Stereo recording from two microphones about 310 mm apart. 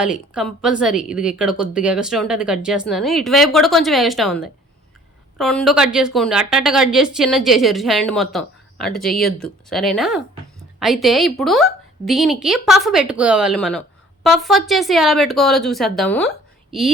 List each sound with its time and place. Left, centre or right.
0.0 s a woman's voice: centre